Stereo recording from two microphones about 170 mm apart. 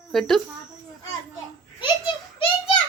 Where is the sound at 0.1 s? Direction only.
Centre (ahead or behind).